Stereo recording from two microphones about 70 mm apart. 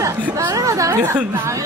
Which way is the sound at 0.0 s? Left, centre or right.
Right.